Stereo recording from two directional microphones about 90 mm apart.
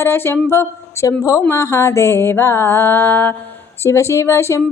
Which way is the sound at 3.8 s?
30° left (ahead or behind).